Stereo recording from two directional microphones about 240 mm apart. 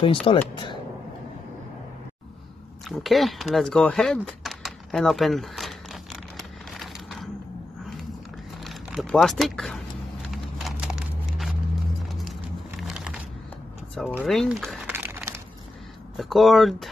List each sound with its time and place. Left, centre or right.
0.0 s speech: left
2.9 s speech: centre
6.7 s crushing: centre
8.6 s speech: centre
10.3 s a sound: centre
12.1 s music: centre
12.8 s a sound: centre
16.2 s speech: centre